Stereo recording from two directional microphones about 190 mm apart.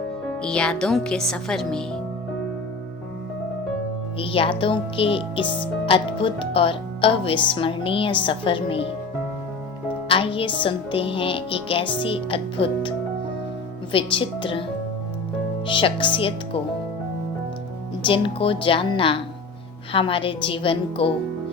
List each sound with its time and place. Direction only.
0.4 s speech: 5° left (ahead or behind)
4.2 s speech: 30° left (ahead or behind)
10.1 s speech: 30° left (ahead or behind)
13.9 s speech: 25° left (ahead or behind)
15.6 s speech: 25° left (ahead or behind)
18.0 s speech: 25° left (ahead or behind)